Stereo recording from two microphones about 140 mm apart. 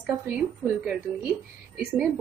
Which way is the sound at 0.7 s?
10° right (ahead or behind).